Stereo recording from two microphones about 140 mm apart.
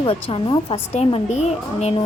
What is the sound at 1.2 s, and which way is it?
Speech, 55° left (ahead or behind).